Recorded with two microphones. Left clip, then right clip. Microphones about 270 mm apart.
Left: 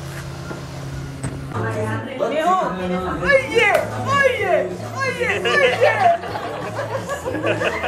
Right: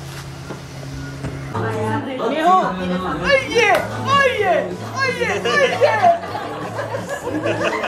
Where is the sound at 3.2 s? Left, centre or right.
Right.